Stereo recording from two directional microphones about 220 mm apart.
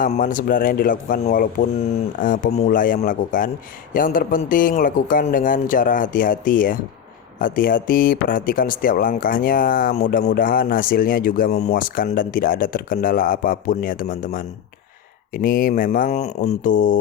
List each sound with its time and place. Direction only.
0.0 s speech: 40° left (ahead or behind)